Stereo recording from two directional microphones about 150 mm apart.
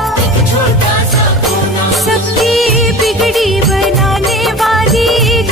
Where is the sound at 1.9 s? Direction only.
Centre (ahead or behind).